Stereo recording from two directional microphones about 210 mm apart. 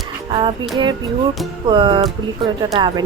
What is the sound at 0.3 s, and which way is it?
Music, 25° right (ahead or behind).